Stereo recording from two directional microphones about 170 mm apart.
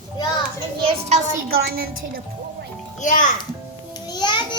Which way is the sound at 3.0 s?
50° left (ahead or behind).